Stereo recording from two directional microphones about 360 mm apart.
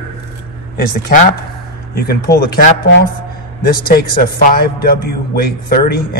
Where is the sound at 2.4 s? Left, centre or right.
Left.